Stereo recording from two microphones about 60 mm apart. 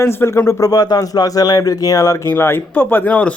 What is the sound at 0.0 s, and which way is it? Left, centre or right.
Speech, left.